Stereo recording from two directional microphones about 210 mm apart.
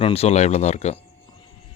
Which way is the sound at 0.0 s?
30° left (ahead or behind).